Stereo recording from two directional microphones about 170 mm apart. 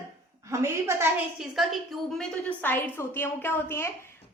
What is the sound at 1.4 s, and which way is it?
Speech, centre (ahead or behind).